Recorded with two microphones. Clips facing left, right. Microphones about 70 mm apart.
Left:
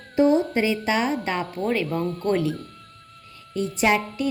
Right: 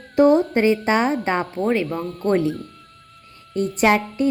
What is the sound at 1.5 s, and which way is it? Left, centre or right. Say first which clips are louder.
Speech: right 2 dB; right.